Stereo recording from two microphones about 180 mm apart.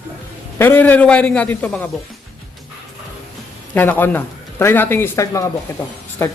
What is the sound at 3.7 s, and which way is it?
A man's voice, 10° left (ahead or behind).